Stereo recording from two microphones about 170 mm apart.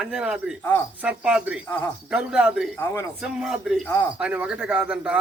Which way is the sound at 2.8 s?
20° left (ahead or behind).